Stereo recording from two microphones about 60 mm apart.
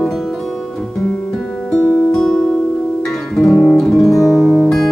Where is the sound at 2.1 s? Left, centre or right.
Centre.